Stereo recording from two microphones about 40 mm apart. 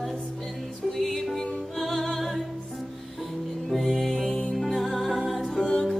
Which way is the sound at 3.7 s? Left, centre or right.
Centre.